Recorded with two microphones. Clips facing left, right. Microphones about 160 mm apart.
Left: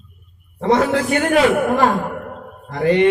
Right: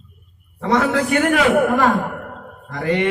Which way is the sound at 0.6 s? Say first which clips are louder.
Left 2 dB; 30° left (ahead or behind).